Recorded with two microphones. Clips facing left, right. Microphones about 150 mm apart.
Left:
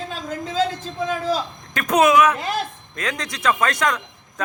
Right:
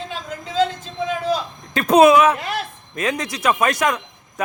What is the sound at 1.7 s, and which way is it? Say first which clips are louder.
A man's voice: right 5 dB; 30° right (ahead or behind).